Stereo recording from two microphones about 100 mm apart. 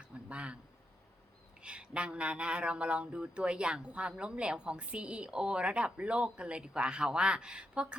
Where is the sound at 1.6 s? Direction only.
10° right (ahead or behind).